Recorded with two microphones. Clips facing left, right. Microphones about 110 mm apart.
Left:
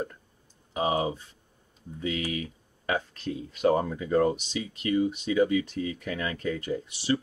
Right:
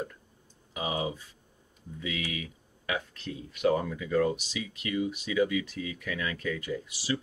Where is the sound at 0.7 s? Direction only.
35° left (ahead or behind).